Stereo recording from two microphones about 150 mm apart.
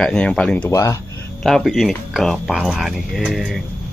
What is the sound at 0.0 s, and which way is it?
Speech, 5° left (ahead or behind).